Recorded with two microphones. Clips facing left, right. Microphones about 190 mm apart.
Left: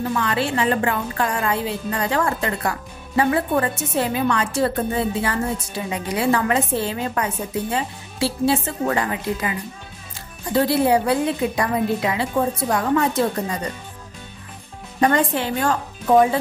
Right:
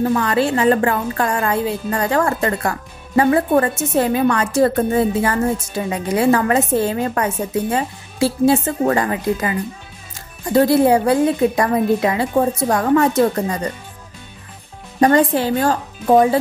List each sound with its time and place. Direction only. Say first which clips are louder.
0.1 s a woman's voice: right 5 dB; 40° right (ahead or behind)
10.5 s a woman's voice: right 5 dB; 45° right (ahead or behind)
15.0 s a woman's voice: right 5 dB; 35° right (ahead or behind)